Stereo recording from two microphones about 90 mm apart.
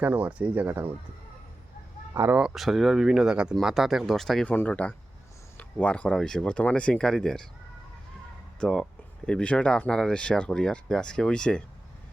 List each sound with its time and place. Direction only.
0.0 s speech: 15° right (ahead or behind)
2.6 s speech: centre (ahead or behind)
4.4 s speech: 15° left (ahead or behind)
8.6 s speech: 10° left (ahead or behind)